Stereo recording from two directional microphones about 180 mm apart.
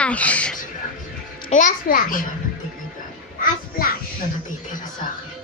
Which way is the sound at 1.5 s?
45° left (ahead or behind).